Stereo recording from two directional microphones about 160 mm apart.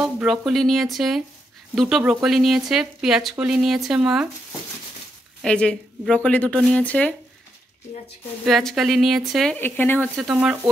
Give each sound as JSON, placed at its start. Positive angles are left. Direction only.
{"t": 0.0, "sound": "speech", "side_deg": -5}
{"t": 8.5, "sound": "speech", "side_deg": 0}
{"t": 9.6, "sound": "speech", "side_deg": 10}
{"t": 10.3, "sound": "speech", "side_deg": -5}